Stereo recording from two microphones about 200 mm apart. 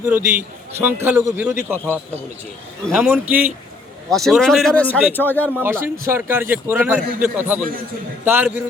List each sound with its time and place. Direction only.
0.0 s a man's voice: 10° right (ahead or behind)
2.8 s speech: centre (ahead or behind)
5.5 s a man's voice: 10° right (ahead or behind)